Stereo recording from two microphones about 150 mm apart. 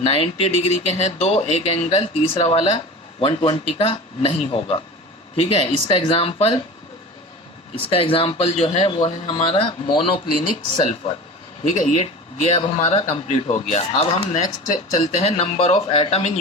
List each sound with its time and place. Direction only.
0.0 s speech: 40° left (ahead or behind)
7.9 s speech: 40° left (ahead or behind)
9.0 s speech: 35° left (ahead or behind)
11.6 s speech: 55° left (ahead or behind)
14.4 s speech: 60° left (ahead or behind); by 16.4 s 45° left (ahead or behind)